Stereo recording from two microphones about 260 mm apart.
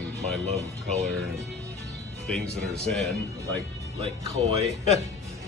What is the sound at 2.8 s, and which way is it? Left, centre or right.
Speech, centre.